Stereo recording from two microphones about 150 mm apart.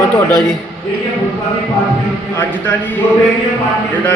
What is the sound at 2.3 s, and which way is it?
Speech, 15° left (ahead or behind).